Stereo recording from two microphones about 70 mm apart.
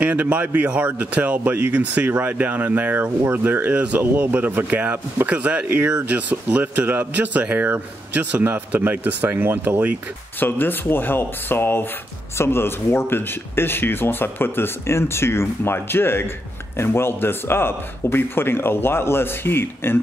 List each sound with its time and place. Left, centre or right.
0.0 s speech: centre
3.7 s speech: centre
10.4 s speech: left